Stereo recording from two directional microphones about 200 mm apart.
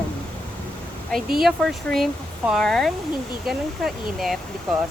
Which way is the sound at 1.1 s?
Centre (ahead or behind).